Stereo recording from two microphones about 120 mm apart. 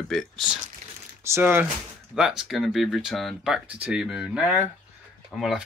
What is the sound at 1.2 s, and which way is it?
Speech, 20° right (ahead or behind).